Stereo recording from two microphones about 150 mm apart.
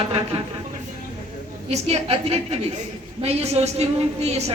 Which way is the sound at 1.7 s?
45° right (ahead or behind).